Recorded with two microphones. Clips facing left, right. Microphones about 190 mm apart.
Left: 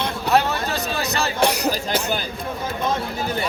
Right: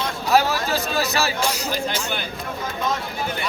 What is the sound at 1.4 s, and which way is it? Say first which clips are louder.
Speech: left 5 dB; 65° left (ahead or behind).